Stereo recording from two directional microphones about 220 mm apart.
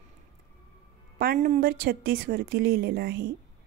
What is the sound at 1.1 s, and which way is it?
A woman's voice, 40° right (ahead or behind).